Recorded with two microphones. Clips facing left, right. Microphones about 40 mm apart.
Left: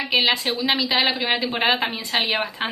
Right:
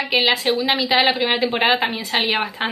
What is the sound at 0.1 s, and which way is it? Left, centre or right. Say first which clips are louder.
A woman's voice: right 2 dB; centre.